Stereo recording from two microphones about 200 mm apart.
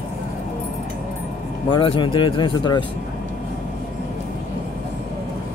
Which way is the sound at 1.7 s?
25° left (ahead or behind).